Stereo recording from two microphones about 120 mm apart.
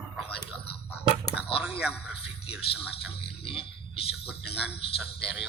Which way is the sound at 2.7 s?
50° left (ahead or behind).